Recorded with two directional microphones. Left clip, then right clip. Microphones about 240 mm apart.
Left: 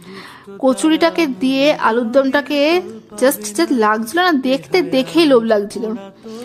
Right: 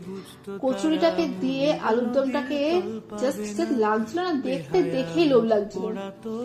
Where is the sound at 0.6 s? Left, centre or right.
Left.